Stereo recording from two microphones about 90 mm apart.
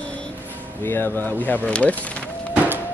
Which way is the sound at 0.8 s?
25° left (ahead or behind).